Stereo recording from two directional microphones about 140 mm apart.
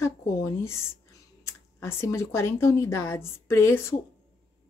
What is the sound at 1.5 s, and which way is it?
Speech, 20° left (ahead or behind).